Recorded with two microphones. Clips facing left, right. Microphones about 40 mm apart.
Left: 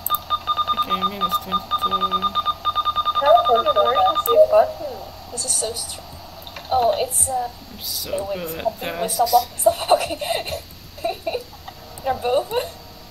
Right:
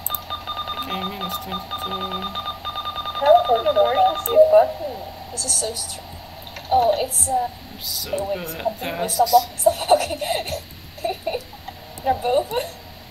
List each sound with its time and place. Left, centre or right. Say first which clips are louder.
0.3 s speech: left 8 dB; centre
5.3 s a woman's voice: left 1 dB; centre
6.7 s a woman's voice: right 1 dB; centre
7.3 s a woman's voice: right 2 dB; centre
9.8 s a sound: even; centre
12.0 s speech: right 1 dB; centre